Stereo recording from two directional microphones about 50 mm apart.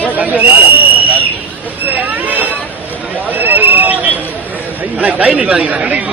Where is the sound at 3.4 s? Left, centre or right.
Right.